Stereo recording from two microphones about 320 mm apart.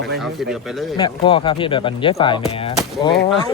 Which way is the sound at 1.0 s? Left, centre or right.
Centre.